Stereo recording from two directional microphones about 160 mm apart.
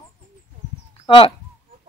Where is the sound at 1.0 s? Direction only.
35° left (ahead or behind).